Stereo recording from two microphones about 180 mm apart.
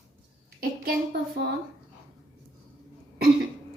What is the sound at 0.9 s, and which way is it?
Speech, 60° right (ahead or behind).